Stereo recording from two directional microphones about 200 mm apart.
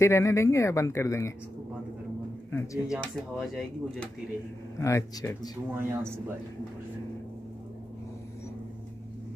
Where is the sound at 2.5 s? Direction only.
10° left (ahead or behind).